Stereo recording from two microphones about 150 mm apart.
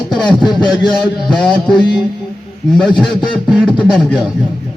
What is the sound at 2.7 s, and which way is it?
A man's voice, centre (ahead or behind).